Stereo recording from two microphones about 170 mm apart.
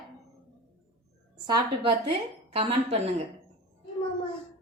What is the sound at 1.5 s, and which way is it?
A woman's voice, 30° right (ahead or behind).